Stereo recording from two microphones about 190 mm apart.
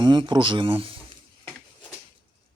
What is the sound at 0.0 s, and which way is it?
Speech, 25° right (ahead or behind).